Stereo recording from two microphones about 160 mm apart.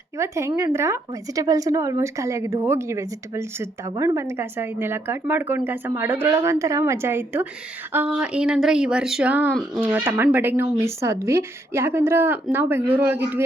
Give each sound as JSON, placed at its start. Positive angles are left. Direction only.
{"t": 0.2, "sound": "a woman's voice", "side_deg": -20}